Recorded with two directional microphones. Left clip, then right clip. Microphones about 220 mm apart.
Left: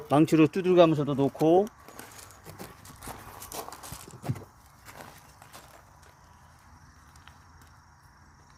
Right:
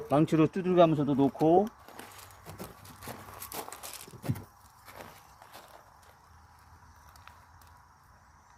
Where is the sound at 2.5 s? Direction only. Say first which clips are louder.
Even; centre (ahead or behind).